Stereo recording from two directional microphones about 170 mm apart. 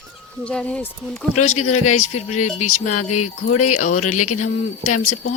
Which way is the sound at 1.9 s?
45° left (ahead or behind).